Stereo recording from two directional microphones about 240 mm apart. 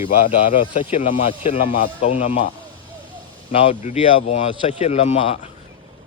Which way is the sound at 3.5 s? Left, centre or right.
Left.